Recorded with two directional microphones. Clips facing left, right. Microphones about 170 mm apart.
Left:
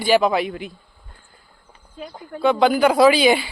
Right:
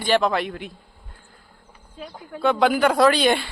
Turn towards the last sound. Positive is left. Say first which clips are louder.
# left 3 dB
turn(degrees=5)  # may be behind; listen again after turning